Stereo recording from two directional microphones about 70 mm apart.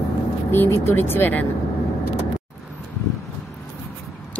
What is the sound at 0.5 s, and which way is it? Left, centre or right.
Speech, left.